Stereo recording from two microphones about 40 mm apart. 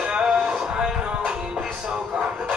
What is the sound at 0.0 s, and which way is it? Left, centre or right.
Music, right.